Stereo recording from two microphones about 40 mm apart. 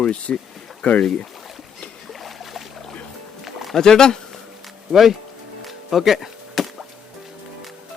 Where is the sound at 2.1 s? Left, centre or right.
Centre.